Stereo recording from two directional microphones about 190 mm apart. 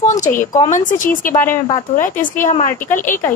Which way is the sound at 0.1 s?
40° left (ahead or behind).